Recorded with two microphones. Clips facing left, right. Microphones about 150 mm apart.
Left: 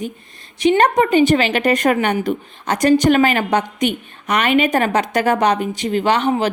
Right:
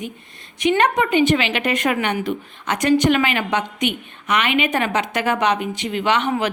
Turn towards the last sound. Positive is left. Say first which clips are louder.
# left 3 dB
turn(degrees=35)  # may be behind; listen again after turning